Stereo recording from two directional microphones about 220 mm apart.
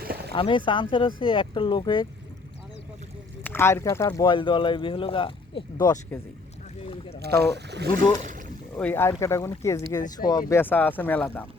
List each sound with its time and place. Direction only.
0.0 s a sound: 45° right (ahead or behind)
0.3 s speech: 20° left (ahead or behind)
3.4 s speech: 10° left (ahead or behind)
6.8 s boat: 25° left (ahead or behind)
7.2 s speech: 50° right (ahead or behind)
8.2 s boat: 35° right (ahead or behind)
8.8 s speech: 10° left (ahead or behind)